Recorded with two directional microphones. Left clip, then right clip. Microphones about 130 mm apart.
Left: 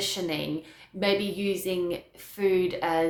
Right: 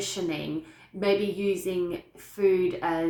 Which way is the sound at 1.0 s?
25° left (ahead or behind).